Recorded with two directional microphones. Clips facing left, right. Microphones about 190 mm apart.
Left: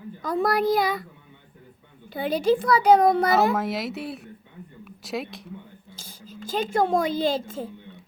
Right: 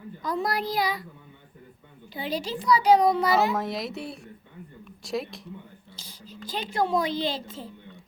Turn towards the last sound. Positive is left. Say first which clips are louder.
# left 5 dB
turn(degrees=50)  # may be behind; listen again after turning